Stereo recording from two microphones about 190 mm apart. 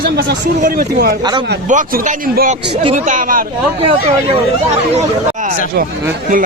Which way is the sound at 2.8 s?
40° right (ahead or behind).